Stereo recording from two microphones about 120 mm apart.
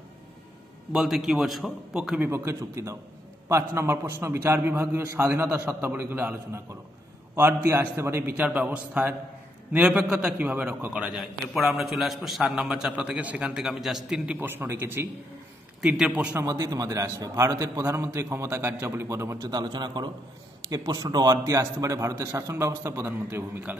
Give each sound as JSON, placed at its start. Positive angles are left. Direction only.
{"t": 0.9, "sound": "a man's voice", "side_deg": -5}
{"t": 15.8, "sound": "a man's voice", "side_deg": -10}
{"t": 16.3, "sound": "a man's voice", "side_deg": -30}
{"t": 19.3, "sound": "a man's voice", "side_deg": -35}